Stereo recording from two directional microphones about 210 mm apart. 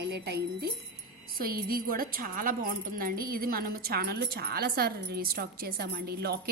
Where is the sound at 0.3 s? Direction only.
50° right (ahead or behind).